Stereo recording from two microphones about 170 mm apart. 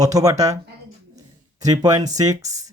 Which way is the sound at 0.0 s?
20° right (ahead or behind).